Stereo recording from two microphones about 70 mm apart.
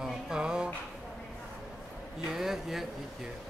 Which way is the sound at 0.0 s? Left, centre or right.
Centre.